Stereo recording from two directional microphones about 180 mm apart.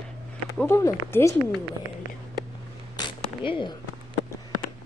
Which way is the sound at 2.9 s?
25° left (ahead or behind).